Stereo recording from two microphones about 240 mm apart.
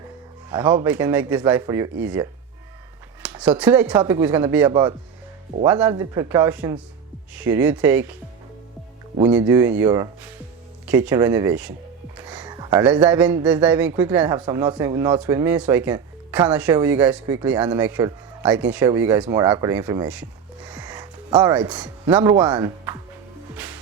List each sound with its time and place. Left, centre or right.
0.5 s speech: centre
9.4 s speech: centre
12.1 s a sound: centre
13.1 s speech: centre
20.8 s music: centre
22.1 s speech: centre
23.6 s music: centre